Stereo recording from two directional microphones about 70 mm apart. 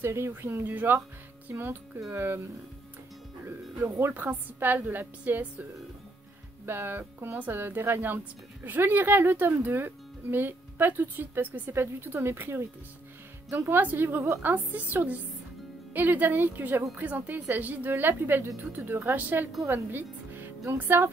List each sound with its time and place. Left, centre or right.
0.0 s speech: right
3.8 s speech: right
6.6 s a woman's voice: right